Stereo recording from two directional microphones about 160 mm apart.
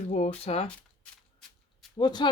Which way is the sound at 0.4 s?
40° left (ahead or behind).